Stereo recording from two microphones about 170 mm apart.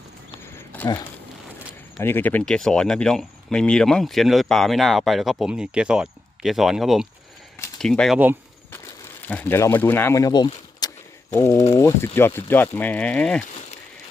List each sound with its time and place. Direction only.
0.4 s a sound: 10° left (ahead or behind)
2.0 s speech: 10° left (ahead or behind)
9.2 s speech: 10° left (ahead or behind)